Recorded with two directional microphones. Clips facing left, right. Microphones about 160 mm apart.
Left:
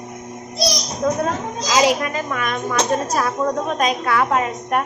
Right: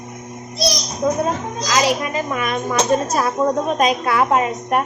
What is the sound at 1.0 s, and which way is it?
Speech, 10° right (ahead or behind).